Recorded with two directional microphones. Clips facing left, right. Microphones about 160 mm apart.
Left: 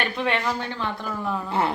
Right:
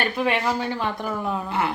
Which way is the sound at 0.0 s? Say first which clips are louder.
Right 2 dB; 5° right (ahead or behind).